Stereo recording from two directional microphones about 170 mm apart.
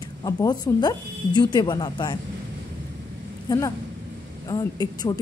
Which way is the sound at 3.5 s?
20° left (ahead or behind).